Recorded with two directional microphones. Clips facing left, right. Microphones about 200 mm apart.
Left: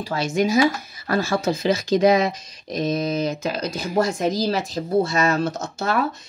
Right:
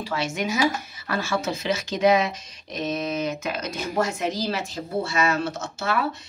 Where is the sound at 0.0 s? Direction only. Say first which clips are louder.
Left 5 dB; 35° left (ahead or behind).